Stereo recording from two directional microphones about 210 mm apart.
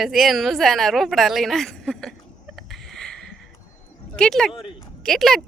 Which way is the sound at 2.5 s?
Centre (ahead or behind).